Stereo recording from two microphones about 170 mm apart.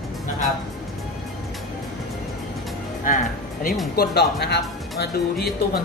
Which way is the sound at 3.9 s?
65° left (ahead or behind).